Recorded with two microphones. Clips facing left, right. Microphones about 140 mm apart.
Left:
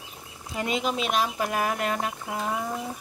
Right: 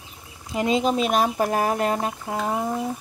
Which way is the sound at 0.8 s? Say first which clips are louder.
Right 4 dB; 40° right (ahead or behind).